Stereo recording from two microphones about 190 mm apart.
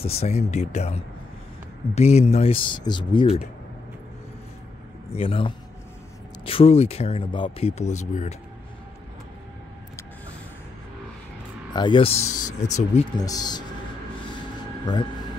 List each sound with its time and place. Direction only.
0.0 s speech: 35° left (ahead or behind)
5.1 s speech: 30° left (ahead or behind)
11.7 s speech: 25° left (ahead or behind)
13.2 s speech: 20° left (ahead or behind)